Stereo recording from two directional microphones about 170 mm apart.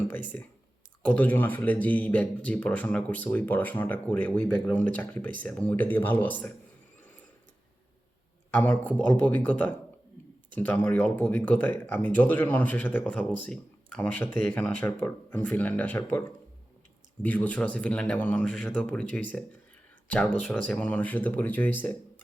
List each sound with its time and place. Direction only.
0.3 s speech: 10° left (ahead or behind)
8.5 s speech: 10° left (ahead or behind)
17.2 s speech: 10° left (ahead or behind)
20.7 s speech: 10° left (ahead or behind)